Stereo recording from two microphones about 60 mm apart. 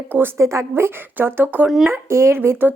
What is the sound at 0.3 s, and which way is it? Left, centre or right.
A woman's voice, right.